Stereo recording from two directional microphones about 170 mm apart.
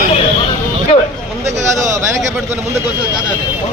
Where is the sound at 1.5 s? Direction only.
40° right (ahead or behind).